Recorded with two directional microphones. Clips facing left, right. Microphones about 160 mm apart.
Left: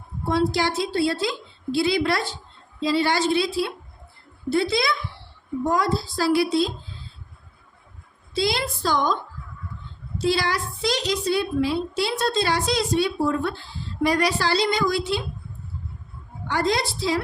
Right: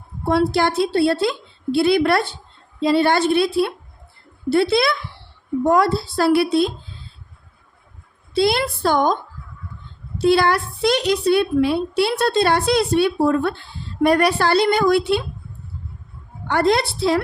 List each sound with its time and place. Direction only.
0.3 s a woman's voice: 60° right (ahead or behind)
8.3 s a woman's voice: 60° right (ahead or behind)
10.2 s a woman's voice: 55° right (ahead or behind)
16.5 s a woman's voice: 60° right (ahead or behind)